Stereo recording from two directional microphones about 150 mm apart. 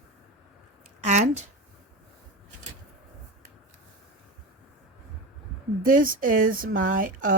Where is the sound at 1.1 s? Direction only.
55° right (ahead or behind).